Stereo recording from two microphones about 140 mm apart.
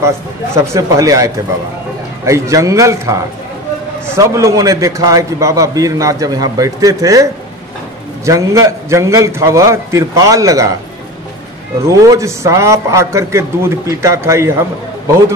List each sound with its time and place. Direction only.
0.6 s a man's voice: 25° right (ahead or behind)
8.3 s a man's voice: 20° right (ahead or behind)
11.8 s a man's voice: 25° right (ahead or behind)